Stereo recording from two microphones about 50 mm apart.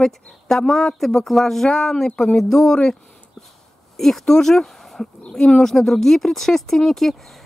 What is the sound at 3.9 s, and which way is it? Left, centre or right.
A woman's voice, centre.